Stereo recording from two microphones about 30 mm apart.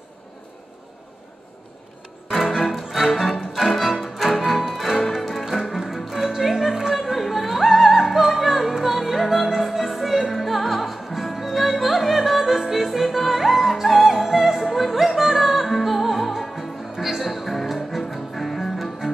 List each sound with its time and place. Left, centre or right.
2.4 s music: centre
6.5 s music: centre
7.0 s music: centre
7.7 s opera: centre
9.6 s music: centre
18.3 s music: centre